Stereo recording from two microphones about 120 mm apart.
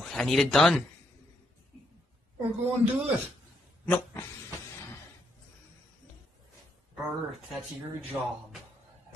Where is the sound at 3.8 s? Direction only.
15° left (ahead or behind).